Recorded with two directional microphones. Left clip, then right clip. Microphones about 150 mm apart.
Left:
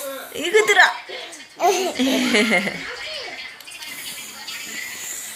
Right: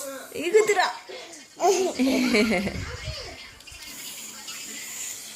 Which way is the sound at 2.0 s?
30° right (ahead or behind).